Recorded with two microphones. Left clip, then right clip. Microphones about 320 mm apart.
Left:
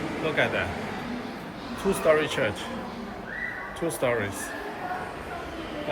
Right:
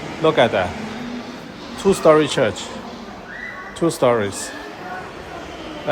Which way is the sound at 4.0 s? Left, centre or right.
Centre.